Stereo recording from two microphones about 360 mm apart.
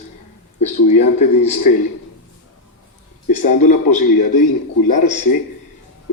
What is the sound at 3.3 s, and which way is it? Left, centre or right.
Speech, centre.